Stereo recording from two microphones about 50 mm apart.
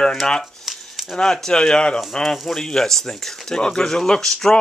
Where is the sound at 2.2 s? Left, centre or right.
Centre.